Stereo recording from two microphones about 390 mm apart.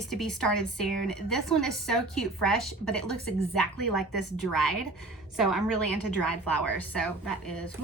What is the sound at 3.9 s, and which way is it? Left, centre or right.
Speech, left.